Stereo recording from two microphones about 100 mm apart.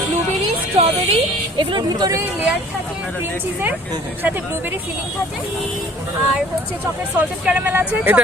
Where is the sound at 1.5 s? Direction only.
50° right (ahead or behind).